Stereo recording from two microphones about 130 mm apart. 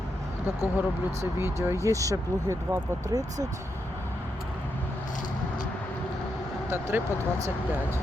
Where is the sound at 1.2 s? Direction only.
20° right (ahead or behind).